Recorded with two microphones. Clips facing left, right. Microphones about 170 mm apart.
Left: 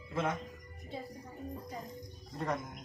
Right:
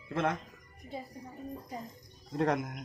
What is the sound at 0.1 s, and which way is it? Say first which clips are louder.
Speech: right 3 dB; 65° right (ahead or behind).